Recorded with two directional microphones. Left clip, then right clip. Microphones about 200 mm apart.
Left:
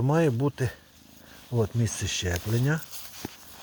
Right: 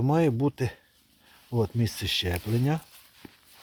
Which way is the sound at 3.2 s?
70° left (ahead or behind).